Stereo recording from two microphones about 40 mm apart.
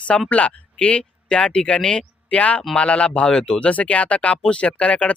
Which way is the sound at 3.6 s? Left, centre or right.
Left.